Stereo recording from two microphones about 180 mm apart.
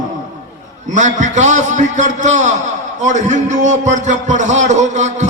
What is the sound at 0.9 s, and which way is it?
A man's voice, 40° right (ahead or behind).